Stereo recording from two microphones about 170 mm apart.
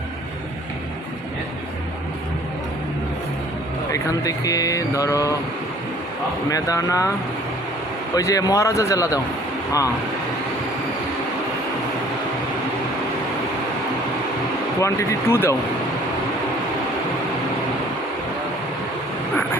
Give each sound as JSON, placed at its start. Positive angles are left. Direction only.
{"t": 3.9, "sound": "speech", "side_deg": 20}
{"t": 6.5, "sound": "speech", "side_deg": 20}
{"t": 8.1, "sound": "speech", "side_deg": 20}
{"t": 14.8, "sound": "speech", "side_deg": 15}